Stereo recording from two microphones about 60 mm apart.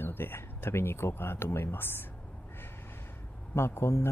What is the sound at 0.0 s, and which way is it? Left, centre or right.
Speech, left.